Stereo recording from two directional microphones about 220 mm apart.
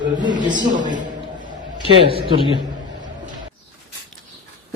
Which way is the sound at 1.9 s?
25° right (ahead or behind).